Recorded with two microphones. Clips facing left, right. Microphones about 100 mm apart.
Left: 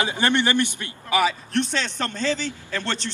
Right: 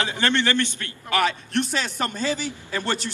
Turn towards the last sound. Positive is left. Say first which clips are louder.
# right 1 dB
turn(degrees=-10)  # may be behind; listen again after turning